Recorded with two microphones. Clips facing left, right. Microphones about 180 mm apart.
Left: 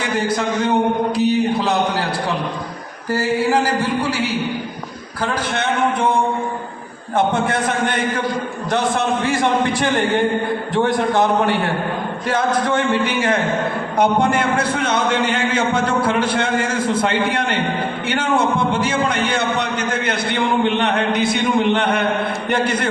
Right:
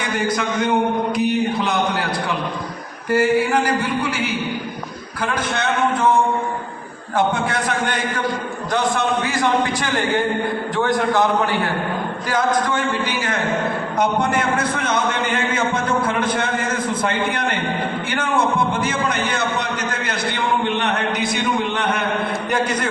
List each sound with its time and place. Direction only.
0.0 s a man's voice: 30° left (ahead or behind)
3.1 s a man's voice: 30° left (ahead or behind)
9.2 s a man's voice: 25° left (ahead or behind)
12.3 s a man's voice: 30° left (ahead or behind)
14.0 s a man's voice: 30° left (ahead or behind)
18.7 s a man's voice: 30° left (ahead or behind)